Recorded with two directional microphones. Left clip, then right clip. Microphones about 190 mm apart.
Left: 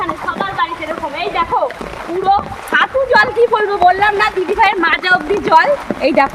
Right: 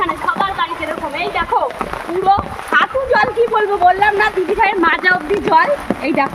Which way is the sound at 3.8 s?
60° left (ahead or behind).